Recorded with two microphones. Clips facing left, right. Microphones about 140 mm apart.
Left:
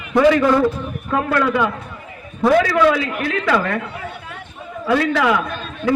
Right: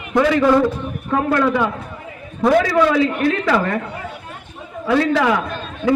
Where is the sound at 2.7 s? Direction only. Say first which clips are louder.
Right 1 dB; 30° right (ahead or behind).